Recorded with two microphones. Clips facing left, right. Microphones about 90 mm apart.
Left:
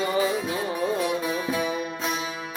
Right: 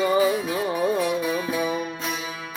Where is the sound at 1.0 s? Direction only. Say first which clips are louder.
Right 2 dB; 20° left (ahead or behind).